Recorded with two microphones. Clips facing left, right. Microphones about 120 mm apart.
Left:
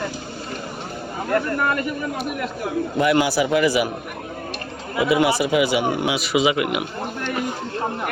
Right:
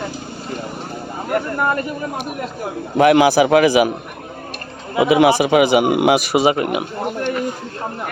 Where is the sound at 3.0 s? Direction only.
85° right.